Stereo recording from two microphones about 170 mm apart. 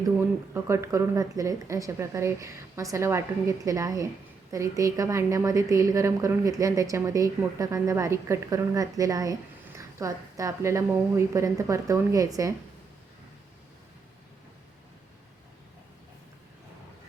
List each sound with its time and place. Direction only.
0.2 s a woman's voice: 15° right (ahead or behind)